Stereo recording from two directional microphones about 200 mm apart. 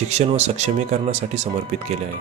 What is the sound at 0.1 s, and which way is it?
Speech, 35° right (ahead or behind).